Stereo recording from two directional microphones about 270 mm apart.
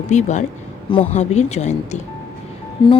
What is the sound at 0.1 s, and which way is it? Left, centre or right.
A woman's voice, left.